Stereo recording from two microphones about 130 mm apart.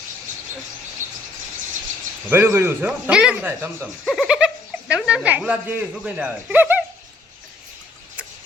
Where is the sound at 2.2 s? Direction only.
15° right (ahead or behind).